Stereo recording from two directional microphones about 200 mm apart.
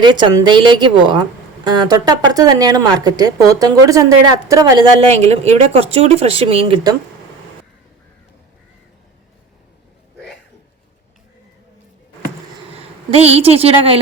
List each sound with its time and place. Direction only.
0.0 s a woman's voice: 25° right (ahead or behind)
13.1 s a woman's voice: 30° right (ahead or behind)